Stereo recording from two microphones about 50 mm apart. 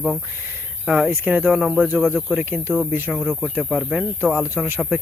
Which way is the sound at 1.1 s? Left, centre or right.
Right.